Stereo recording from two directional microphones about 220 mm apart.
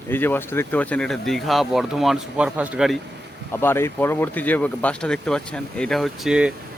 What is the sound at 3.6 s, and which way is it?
Speech, 10° left (ahead or behind).